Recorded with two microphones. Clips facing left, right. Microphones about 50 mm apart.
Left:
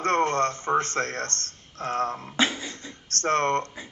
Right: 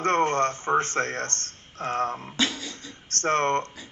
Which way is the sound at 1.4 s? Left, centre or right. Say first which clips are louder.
Right 1 dB; right.